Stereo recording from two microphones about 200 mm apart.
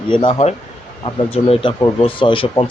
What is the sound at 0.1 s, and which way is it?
Speech, 25° left (ahead or behind).